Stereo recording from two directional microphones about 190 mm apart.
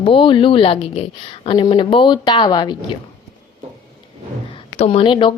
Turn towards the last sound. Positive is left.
turn(degrees=25)  # may be behind; listen again after turning